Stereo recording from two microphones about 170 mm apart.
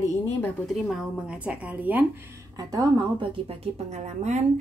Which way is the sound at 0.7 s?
Centre (ahead or behind).